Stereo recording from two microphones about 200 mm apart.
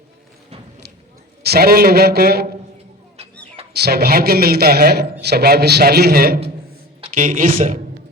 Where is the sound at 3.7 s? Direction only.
55° right (ahead or behind).